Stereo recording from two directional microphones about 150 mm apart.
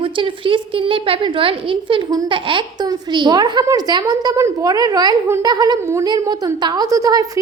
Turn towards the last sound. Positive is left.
turn(degrees=-25)  # may be behind; listen again after turning